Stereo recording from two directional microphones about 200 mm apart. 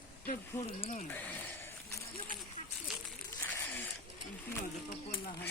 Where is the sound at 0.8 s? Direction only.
35° left (ahead or behind).